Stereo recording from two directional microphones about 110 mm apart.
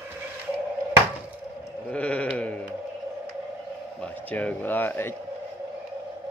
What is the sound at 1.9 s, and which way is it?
Sheep, 10° left (ahead or behind).